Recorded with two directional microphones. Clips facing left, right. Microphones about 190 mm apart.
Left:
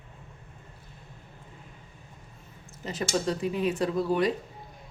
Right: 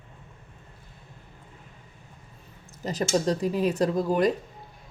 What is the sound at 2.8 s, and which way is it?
Speech, 40° right (ahead or behind).